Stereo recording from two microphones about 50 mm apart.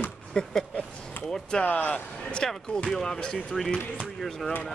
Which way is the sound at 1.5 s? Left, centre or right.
Left.